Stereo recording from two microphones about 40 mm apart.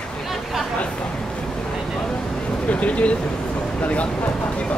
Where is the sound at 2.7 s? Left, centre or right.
Left.